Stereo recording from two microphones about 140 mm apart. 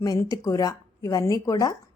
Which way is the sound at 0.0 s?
25° left (ahead or behind).